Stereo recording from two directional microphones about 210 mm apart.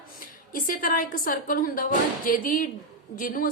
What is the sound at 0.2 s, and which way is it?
A woman's voice, 40° left (ahead or behind).